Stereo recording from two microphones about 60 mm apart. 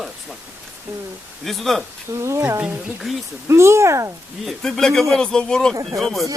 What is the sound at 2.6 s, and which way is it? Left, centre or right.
Speech, right.